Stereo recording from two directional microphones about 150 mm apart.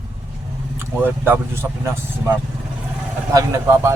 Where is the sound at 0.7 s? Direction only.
15° right (ahead or behind).